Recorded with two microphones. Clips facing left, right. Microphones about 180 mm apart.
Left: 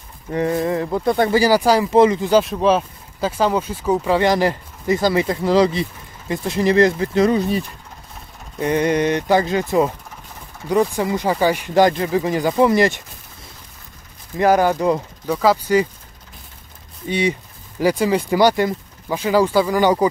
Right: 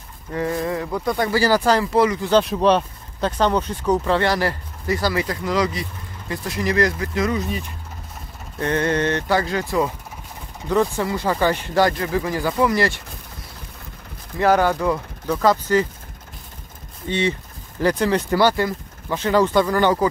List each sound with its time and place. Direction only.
0.3 s speech: 20° left (ahead or behind)
1.4 s speech: 10° left (ahead or behind)
2.3 s speech: centre (ahead or behind); by 7.6 s 35° left (ahead or behind)
8.5 s speech: 15° left (ahead or behind)
14.4 s speech: 15° left (ahead or behind)
15.2 s speech: 10° left (ahead or behind)
17.1 s speech: 15° left (ahead or behind)